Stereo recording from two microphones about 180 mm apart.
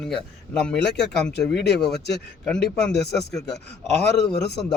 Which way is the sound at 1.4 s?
70° left (ahead or behind).